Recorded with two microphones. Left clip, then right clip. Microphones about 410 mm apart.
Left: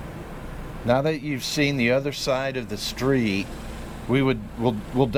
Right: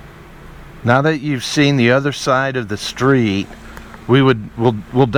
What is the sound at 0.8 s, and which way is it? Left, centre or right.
Speech, right.